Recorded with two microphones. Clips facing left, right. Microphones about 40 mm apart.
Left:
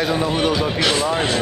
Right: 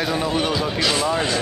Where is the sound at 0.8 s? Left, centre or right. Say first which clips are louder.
Even; left.